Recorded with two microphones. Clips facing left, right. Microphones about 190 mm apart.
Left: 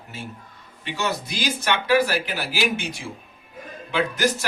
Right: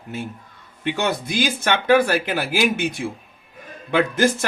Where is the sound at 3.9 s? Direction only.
55° right (ahead or behind).